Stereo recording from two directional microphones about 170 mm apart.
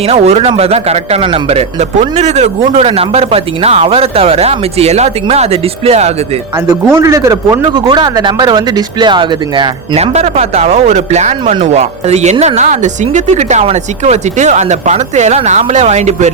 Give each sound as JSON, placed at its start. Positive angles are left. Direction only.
{"t": 0.0, "sound": "speech", "side_deg": -40}
{"t": 7.0, "sound": "a man's voice", "side_deg": -20}